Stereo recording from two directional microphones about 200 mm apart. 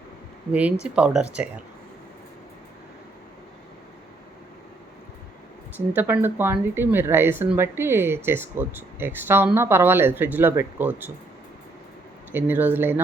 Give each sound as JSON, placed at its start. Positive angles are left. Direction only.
{"t": 0.5, "sound": "speech", "side_deg": -5}
{"t": 5.7, "sound": "speech", "side_deg": -10}
{"t": 12.3, "sound": "speech", "side_deg": -10}